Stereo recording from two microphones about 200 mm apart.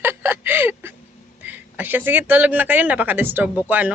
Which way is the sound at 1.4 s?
10° right (ahead or behind).